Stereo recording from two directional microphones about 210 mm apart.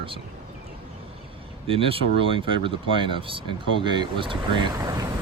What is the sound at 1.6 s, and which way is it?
Speech, 25° right (ahead or behind).